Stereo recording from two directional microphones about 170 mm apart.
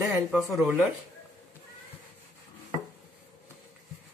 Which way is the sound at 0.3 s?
5° right (ahead or behind).